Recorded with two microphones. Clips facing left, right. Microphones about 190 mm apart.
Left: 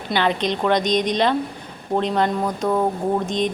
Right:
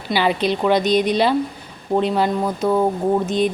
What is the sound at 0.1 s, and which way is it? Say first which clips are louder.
Speech: right 2 dB; 5° right (ahead or behind).